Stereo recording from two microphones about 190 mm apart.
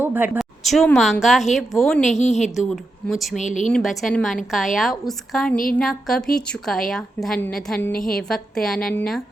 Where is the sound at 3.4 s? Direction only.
40° left (ahead or behind).